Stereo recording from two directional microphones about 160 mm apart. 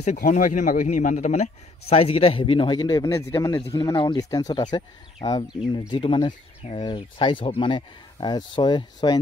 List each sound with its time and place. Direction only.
0.0 s a man's voice: 50° left (ahead or behind); by 9.2 s 30° left (ahead or behind)